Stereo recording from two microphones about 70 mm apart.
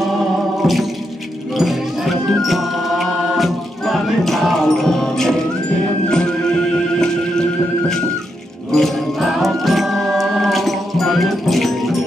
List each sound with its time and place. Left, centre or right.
0.6 s music: centre
8.7 s music: centre